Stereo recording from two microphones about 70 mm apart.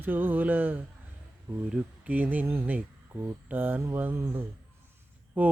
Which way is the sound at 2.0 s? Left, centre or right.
Right.